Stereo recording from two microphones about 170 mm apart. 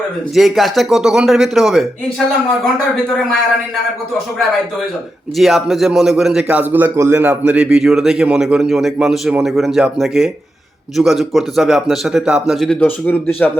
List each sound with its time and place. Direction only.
0.3 s a man's voice: centre (ahead or behind)
5.4 s a man's voice: centre (ahead or behind)